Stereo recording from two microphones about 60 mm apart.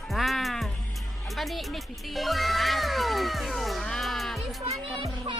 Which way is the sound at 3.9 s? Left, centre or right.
Centre.